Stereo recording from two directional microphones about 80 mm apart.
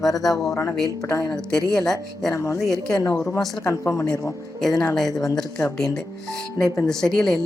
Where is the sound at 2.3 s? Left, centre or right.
Left.